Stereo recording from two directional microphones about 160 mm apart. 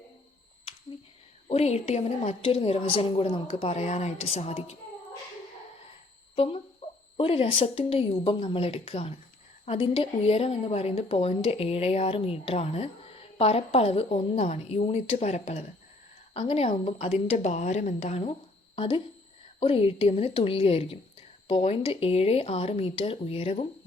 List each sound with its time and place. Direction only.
1.5 s a woman's voice: 40° left (ahead or behind)
6.3 s speech: 35° left (ahead or behind)
6.8 s a sound: 45° left (ahead or behind)
7.2 s a woman's voice: 35° left (ahead or behind)